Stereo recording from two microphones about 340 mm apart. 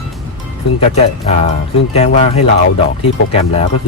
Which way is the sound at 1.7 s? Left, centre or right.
Centre.